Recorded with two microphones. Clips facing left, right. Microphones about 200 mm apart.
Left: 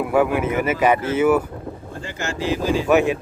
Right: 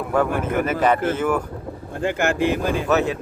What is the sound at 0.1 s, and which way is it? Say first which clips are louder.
Speech: left 1 dB; 10° left (ahead or behind).